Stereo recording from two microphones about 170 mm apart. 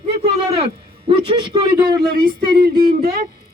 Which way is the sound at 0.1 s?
35° right (ahead or behind).